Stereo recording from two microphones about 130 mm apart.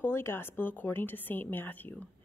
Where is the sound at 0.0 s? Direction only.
20° left (ahead or behind).